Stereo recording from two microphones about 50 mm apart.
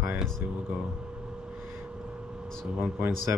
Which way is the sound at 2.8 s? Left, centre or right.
Right.